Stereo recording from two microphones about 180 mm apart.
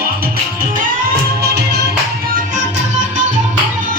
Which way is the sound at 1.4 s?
65° right (ahead or behind).